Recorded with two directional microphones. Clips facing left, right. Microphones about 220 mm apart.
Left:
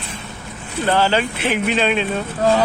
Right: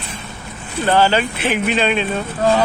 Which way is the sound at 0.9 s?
5° right (ahead or behind).